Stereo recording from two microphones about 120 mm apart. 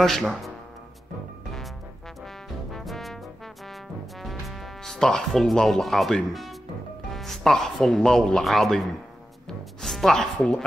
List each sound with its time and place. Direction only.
0.0 s speech: 5° left (ahead or behind)
2.7 s brass instrument: centre (ahead or behind)
4.2 s speech: centre (ahead or behind)
9.5 s music: centre (ahead or behind)